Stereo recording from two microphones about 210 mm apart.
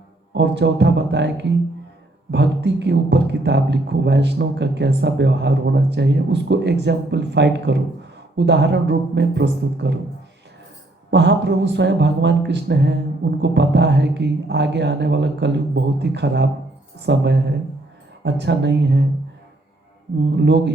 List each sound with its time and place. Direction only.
0.3 s speech: 55° right (ahead or behind)
11.1 s speech: 55° right (ahead or behind)
20.3 s speech: 55° right (ahead or behind)